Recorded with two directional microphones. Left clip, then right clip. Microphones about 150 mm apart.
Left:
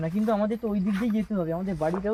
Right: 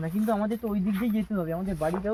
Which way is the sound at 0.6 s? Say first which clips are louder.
Left 1 dB; 25° left (ahead or behind).